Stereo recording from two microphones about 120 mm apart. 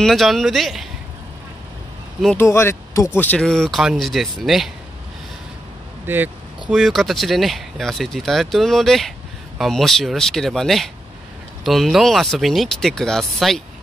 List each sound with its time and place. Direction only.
0.0 s speech: centre (ahead or behind)
2.3 s speech: 20° left (ahead or behind)
3.2 s speech: 10° left (ahead or behind)
6.0 s speech: 15° right (ahead or behind)
6.7 s speech: centre (ahead or behind)